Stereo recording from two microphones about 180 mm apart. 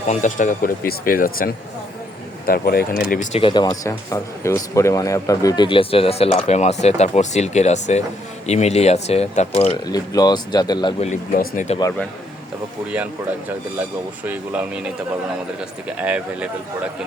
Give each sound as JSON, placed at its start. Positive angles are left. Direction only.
{"t": 0.1, "sound": "speech", "side_deg": 45}
{"t": 3.3, "sound": "speech", "side_deg": 25}
{"t": 9.8, "sound": "speech", "side_deg": 20}
{"t": 11.0, "sound": "speech", "side_deg": 45}